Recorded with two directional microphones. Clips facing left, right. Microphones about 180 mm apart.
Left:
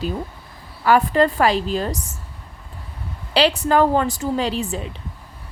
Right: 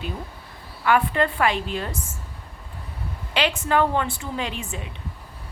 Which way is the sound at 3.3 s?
35° left (ahead or behind).